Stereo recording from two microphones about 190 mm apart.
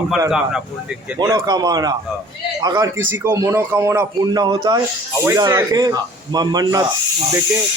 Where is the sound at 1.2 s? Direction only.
20° right (ahead or behind).